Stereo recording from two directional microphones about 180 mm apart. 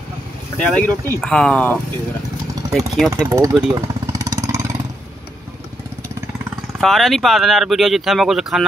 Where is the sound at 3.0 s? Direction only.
20° right (ahead or behind).